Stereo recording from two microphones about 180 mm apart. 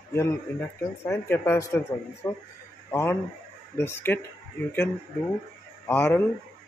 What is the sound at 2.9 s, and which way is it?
Speech, 10° left (ahead or behind).